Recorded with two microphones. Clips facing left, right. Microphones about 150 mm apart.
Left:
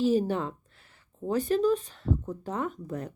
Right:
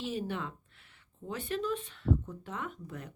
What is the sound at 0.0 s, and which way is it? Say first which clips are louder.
Speech: left 11 dB; 40° left (ahead or behind).